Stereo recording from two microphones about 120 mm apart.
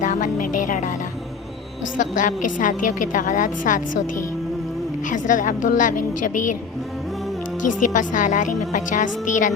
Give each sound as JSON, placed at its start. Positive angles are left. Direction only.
{"t": 0.0, "sound": "music", "side_deg": 90}
{"t": 2.0, "sound": "a woman's voice", "side_deg": 90}
{"t": 5.1, "sound": "a woman's voice", "side_deg": 90}
{"t": 7.9, "sound": "a woman's voice", "side_deg": 90}